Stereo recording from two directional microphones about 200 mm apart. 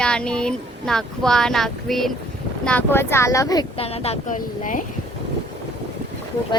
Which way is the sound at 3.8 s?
30° left (ahead or behind).